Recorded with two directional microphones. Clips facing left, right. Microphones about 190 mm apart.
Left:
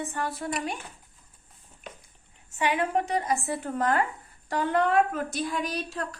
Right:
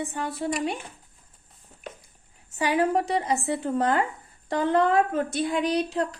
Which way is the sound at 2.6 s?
35° right (ahead or behind).